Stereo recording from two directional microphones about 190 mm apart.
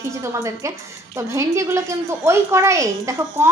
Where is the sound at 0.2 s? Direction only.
15° right (ahead or behind).